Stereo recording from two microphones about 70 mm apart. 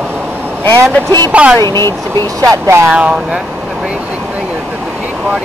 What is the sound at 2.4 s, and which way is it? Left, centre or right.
Speech, right.